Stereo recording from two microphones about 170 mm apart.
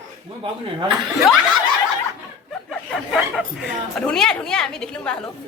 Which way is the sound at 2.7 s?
Centre (ahead or behind).